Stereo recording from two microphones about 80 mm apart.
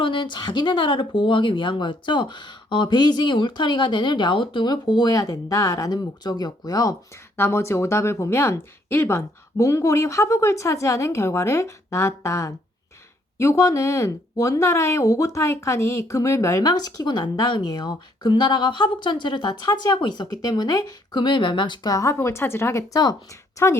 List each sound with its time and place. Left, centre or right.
0.0 s speech: left
7.3 s speech: left
16.6 s speech: left
21.9 s speech: left
22.9 s speech: left
23.6 s speech: left